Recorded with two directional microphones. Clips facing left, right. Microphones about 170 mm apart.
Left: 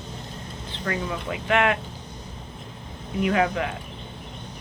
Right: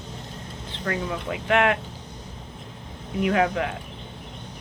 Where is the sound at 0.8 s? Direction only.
50° right (ahead or behind).